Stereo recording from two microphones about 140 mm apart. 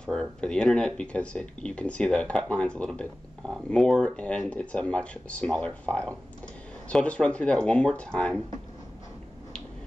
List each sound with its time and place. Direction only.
0.0 s speech: 5° left (ahead or behind)